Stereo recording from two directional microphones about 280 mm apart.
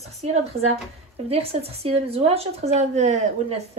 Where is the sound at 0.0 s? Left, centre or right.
Right.